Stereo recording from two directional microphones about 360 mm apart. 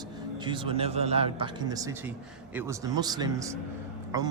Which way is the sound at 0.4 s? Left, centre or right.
Centre.